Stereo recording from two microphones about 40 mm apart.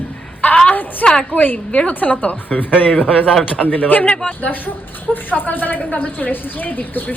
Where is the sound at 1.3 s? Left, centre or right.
Left.